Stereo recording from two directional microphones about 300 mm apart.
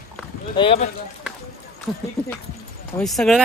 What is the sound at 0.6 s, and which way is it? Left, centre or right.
Speech, centre.